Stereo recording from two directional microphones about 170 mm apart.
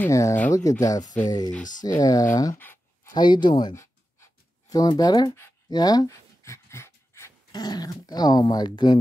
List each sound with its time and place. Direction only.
0.0 s speech: 15° left (ahead or behind)
2.3 s a sound: 15° left (ahead or behind)
3.1 s speech: 25° left (ahead or behind)